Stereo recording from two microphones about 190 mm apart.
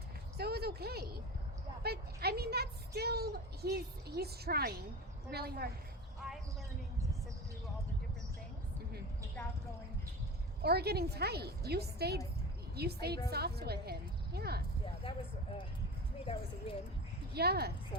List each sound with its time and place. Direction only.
0.3 s a sound: 55° right (ahead or behind)
5.3 s a woman's voice: 55° right (ahead or behind)
6.2 s a sound: centre (ahead or behind)
10.6 s a woman's voice: 55° right (ahead or behind)
16.2 s a woman's voice: 30° left (ahead or behind)
17.3 s a woman's voice: 55° right (ahead or behind)